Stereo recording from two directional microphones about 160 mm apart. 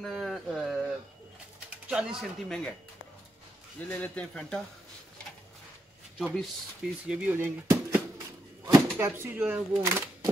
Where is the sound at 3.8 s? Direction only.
10° left (ahead or behind).